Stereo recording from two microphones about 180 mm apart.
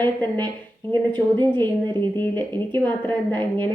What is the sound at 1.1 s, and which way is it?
A woman's voice, 25° right (ahead or behind).